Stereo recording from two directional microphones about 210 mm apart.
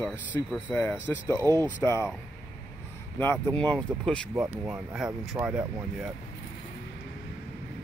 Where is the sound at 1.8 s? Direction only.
15° left (ahead or behind).